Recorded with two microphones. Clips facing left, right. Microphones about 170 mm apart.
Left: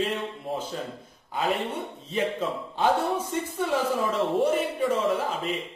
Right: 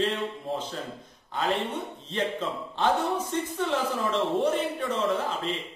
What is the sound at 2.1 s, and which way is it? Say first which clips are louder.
Speech: left 2 dB; 10° left (ahead or behind).